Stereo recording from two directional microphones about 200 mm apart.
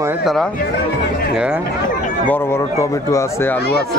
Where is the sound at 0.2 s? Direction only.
Centre (ahead or behind).